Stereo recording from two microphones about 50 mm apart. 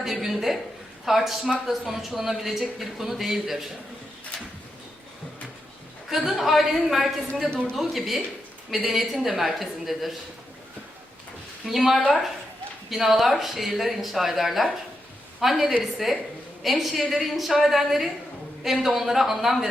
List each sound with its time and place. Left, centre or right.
0.0 s speech: centre
6.1 s speech: centre
7.5 s speech: centre
7.8 s speech: centre
11.6 s speech: centre